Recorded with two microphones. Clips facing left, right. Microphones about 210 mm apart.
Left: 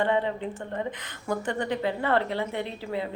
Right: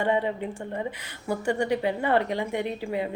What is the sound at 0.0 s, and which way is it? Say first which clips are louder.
A woman's voice: even; 10° right (ahead or behind).